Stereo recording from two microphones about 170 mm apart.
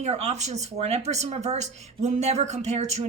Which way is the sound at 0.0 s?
40° right (ahead or behind).